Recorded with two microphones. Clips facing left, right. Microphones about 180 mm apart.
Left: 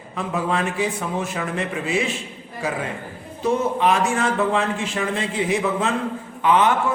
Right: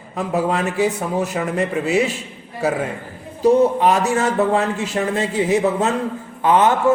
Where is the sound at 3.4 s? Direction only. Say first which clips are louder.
Right 6 dB; 40° right (ahead or behind).